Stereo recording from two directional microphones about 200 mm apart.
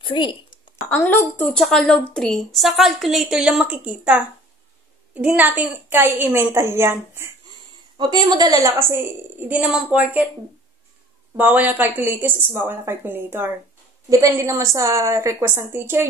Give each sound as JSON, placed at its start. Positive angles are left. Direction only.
{"t": 0.0, "sound": "a woman's voice", "side_deg": 25}
{"t": 0.8, "sound": "a woman's voice", "side_deg": 10}
{"t": 11.3, "sound": "a woman's voice", "side_deg": -10}